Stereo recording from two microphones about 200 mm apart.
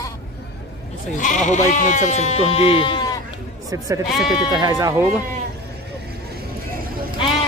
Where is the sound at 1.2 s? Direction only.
40° left (ahead or behind); by 3.2 s 25° left (ahead or behind).